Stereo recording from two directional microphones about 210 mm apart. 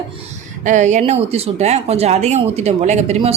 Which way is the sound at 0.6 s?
35° right (ahead or behind).